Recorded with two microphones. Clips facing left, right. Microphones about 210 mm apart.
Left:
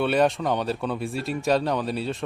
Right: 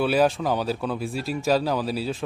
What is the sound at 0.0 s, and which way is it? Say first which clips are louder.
Speech: right 1 dB; centre (ahead or behind).